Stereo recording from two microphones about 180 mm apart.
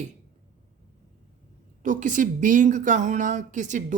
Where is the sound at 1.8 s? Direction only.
45° right (ahead or behind).